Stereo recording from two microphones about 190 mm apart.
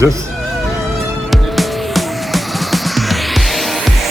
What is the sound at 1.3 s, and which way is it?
Music, centre (ahead or behind).